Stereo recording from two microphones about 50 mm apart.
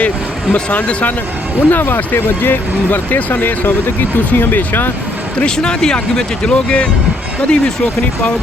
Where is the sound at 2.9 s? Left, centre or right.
Left.